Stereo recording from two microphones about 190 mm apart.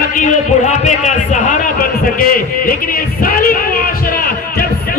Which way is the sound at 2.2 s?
50° left (ahead or behind).